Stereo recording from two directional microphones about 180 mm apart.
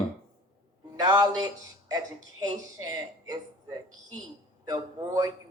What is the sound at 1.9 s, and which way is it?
Speech, 20° right (ahead or behind).